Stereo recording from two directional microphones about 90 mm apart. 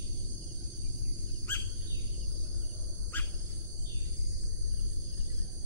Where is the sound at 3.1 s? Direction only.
20° left (ahead or behind).